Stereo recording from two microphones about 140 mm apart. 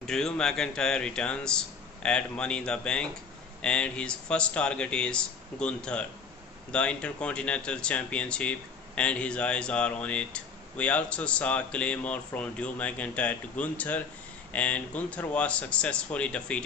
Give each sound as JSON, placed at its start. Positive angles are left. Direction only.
{"t": 0.0, "sound": "speech", "side_deg": 5}